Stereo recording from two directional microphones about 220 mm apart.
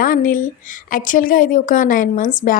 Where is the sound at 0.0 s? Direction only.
40° left (ahead or behind).